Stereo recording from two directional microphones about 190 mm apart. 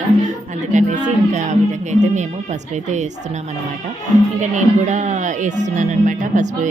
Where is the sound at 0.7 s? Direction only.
40° right (ahead or behind).